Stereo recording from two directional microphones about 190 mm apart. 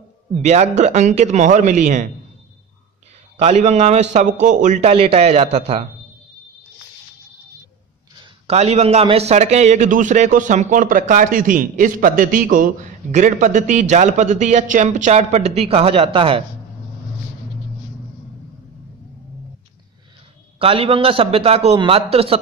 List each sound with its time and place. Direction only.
0.4 s a man's voice: 35° right (ahead or behind)
3.3 s a man's voice: 35° right (ahead or behind)
8.5 s a man's voice: 35° right (ahead or behind)
20.5 s a man's voice: 30° right (ahead or behind)